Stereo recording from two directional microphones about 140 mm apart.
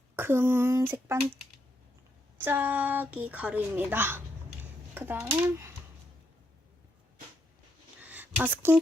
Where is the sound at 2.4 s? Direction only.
15° right (ahead or behind).